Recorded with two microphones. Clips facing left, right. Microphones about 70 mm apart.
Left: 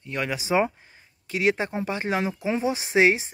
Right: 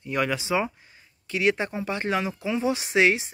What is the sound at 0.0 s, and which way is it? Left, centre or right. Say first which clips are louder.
Speech: right 3 dB; centre.